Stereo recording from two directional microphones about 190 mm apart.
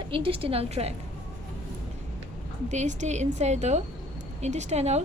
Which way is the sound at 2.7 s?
40° right (ahead or behind).